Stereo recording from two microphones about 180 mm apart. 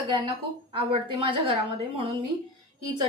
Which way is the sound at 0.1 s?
25° right (ahead or behind).